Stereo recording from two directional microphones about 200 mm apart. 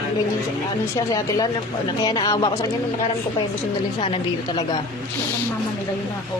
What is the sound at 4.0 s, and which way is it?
Speech, 25° left (ahead or behind).